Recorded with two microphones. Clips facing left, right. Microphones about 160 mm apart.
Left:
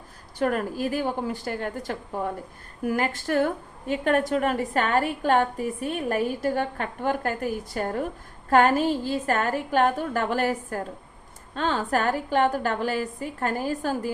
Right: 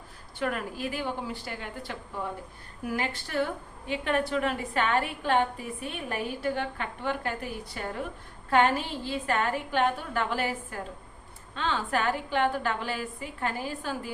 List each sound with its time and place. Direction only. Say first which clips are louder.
0.3 s a woman's voice: left 6 dB; 40° left (ahead or behind)